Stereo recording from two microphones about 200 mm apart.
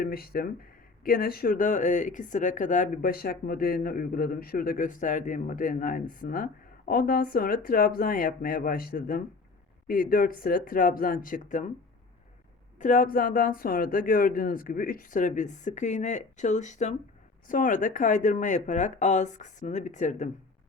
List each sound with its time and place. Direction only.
0.0 s speech: 50° left (ahead or behind)
12.8 s speech: 40° left (ahead or behind)